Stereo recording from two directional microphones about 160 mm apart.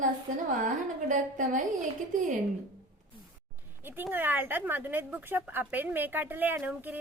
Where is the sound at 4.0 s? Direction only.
10° right (ahead or behind).